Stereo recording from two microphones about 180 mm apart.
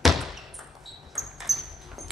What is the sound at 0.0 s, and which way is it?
Basketball bounce, centre (ahead or behind).